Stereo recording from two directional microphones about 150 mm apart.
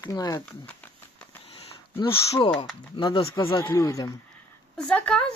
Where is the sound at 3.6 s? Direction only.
20° left (ahead or behind).